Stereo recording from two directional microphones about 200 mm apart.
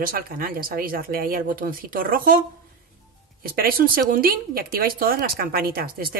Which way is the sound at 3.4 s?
50° right (ahead or behind).